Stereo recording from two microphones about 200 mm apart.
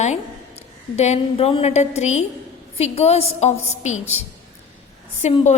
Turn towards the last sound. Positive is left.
turn(degrees=35)  # may be behind; listen again after turning